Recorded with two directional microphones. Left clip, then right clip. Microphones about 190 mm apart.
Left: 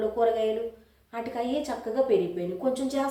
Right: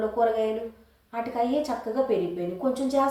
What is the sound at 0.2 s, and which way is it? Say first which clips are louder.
Speech: right 1 dB; 15° left (ahead or behind).